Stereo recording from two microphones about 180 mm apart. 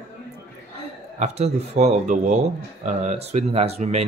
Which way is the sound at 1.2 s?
40° right (ahead or behind).